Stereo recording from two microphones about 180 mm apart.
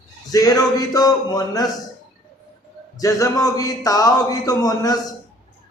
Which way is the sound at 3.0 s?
20° left (ahead or behind).